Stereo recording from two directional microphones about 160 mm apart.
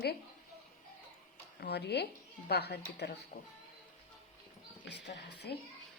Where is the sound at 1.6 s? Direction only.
90° left.